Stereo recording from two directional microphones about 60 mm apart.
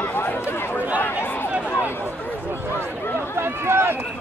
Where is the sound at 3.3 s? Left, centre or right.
Right.